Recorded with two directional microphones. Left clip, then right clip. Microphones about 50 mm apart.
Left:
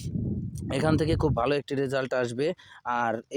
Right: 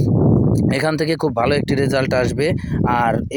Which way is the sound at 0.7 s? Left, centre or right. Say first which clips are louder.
Right 3 dB; right.